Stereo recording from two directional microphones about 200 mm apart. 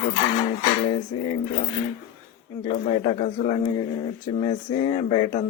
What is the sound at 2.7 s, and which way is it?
Speech, 25° left (ahead or behind).